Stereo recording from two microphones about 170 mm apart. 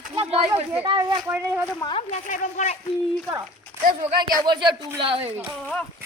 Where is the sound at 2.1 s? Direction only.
50° left (ahead or behind).